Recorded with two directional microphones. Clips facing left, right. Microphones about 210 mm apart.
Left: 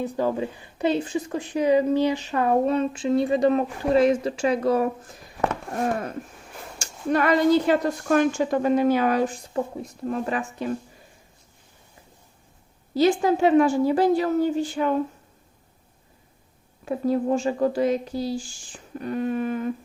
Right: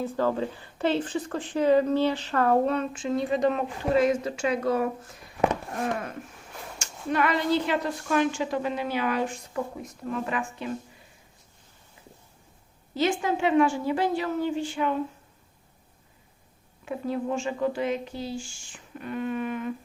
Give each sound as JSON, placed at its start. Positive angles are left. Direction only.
{"t": 0.0, "sound": "speech", "side_deg": 15}
{"t": 3.0, "sound": "speech", "side_deg": 30}
{"t": 6.7, "sound": "a woman's voice", "side_deg": 40}
{"t": 12.9, "sound": "speech", "side_deg": 35}
{"t": 16.8, "sound": "speech", "side_deg": 40}